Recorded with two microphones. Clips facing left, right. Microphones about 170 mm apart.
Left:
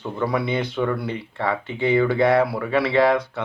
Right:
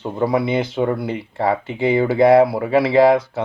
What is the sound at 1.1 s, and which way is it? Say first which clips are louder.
Speech: right 5 dB; 35° right (ahead or behind).